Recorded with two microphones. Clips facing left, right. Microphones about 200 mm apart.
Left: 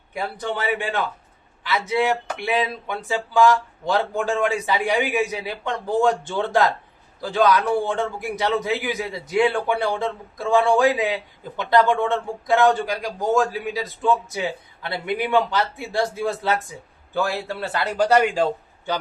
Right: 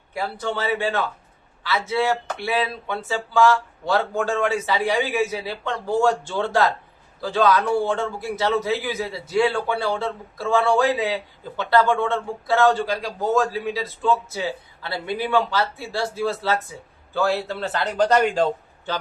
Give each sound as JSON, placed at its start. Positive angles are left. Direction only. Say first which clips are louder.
{"t": 0.1, "sound": "a man's voice", "louder": "even", "side_deg": 15}